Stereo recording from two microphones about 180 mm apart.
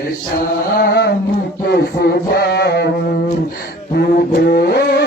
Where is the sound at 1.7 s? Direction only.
65° left (ahead or behind).